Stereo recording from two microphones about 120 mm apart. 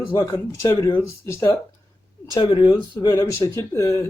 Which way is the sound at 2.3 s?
40° left (ahead or behind).